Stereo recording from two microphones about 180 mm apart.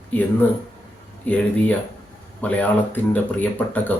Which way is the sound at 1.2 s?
10° left (ahead or behind).